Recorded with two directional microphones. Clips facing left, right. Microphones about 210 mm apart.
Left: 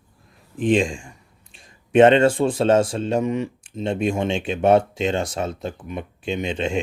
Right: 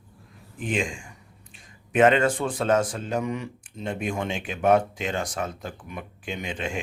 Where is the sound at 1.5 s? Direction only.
30° left (ahead or behind).